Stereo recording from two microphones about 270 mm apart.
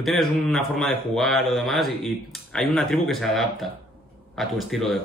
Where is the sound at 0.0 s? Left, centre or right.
Centre.